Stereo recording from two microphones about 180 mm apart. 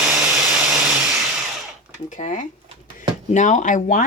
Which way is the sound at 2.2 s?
40° left (ahead or behind).